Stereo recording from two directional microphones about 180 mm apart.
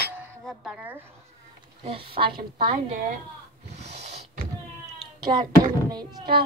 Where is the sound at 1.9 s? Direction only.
30° right (ahead or behind).